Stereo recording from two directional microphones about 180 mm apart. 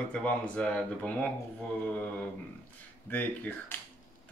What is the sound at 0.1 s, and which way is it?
Speech, 5° left (ahead or behind).